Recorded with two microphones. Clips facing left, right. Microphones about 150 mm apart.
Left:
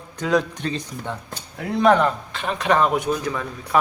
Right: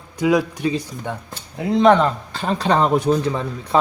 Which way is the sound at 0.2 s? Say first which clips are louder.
Right 4 dB; 10° right (ahead or behind).